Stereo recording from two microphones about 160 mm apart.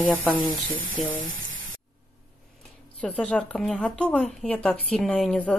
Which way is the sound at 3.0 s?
5° left (ahead or behind).